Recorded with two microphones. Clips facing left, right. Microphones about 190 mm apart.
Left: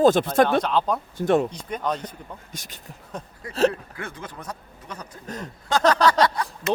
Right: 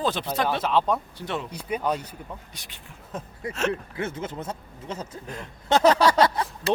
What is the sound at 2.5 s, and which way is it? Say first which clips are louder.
Speech: left 5 dB; 45° left (ahead or behind).